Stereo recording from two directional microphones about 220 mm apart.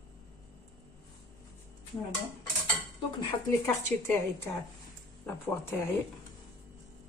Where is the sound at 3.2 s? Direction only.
15° left (ahead or behind).